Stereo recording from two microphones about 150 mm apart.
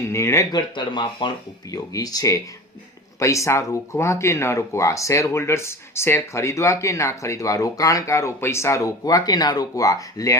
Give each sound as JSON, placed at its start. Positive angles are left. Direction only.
{"t": 0.0, "sound": "speech", "side_deg": 20}
{"t": 0.8, "sound": "speech", "side_deg": 30}